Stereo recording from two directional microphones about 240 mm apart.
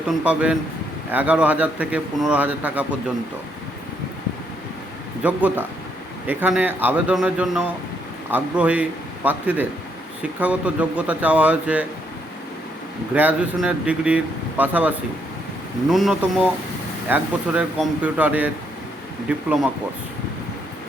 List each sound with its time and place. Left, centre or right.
0.1 s speech: centre
5.2 s speech: centre
13.1 s speech: centre